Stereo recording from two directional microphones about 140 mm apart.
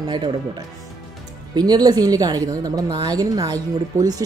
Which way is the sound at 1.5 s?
30° right (ahead or behind).